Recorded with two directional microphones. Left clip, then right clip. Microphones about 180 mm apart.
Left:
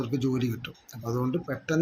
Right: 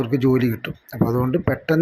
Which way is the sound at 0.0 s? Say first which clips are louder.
Right 10 dB; 20° right (ahead or behind).